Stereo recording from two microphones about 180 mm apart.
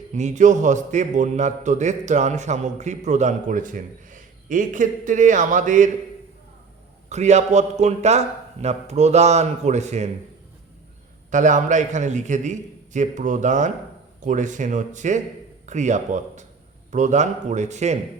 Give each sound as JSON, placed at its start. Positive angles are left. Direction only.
{"t": 0.1, "sound": "a man's voice", "side_deg": -40}
{"t": 7.1, "sound": "a man's voice", "side_deg": -40}
{"t": 11.3, "sound": "a man's voice", "side_deg": -45}